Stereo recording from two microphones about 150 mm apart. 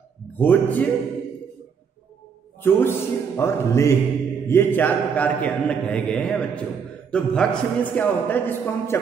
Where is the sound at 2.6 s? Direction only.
15° left (ahead or behind).